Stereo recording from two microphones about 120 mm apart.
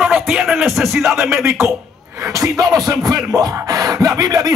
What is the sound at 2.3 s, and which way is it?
Music, 30° right (ahead or behind).